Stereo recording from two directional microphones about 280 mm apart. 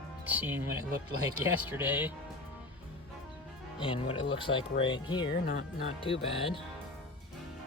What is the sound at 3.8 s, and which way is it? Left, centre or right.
Speech, centre.